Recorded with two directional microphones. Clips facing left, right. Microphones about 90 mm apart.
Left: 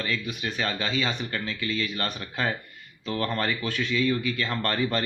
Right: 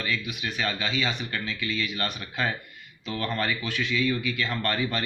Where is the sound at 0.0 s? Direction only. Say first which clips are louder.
Left 1 dB; 35° left (ahead or behind).